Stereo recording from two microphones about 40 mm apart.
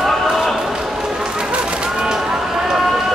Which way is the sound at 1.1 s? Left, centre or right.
Right.